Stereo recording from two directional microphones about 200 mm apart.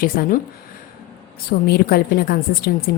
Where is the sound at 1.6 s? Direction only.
50° left (ahead or behind).